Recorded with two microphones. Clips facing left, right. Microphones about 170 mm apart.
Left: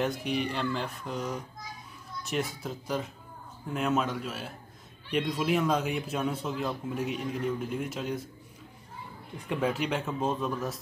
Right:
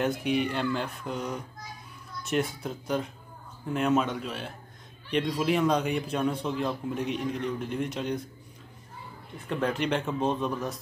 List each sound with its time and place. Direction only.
0.0 s a man's voice: centre (ahead or behind)
9.5 s a man's voice: 5° left (ahead or behind)